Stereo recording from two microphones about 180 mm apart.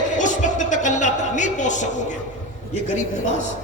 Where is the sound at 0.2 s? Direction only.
45° left (ahead or behind).